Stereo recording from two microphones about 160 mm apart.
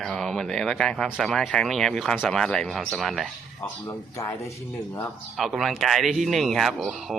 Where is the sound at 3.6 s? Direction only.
15° left (ahead or behind).